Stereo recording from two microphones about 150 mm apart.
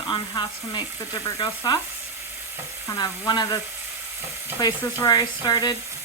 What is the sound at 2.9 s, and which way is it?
Frying, 25° left (ahead or behind).